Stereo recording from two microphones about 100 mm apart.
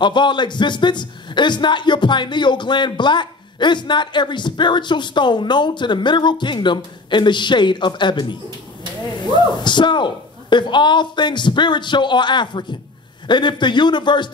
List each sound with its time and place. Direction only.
0.0 s a man's voice: 50° left (ahead or behind)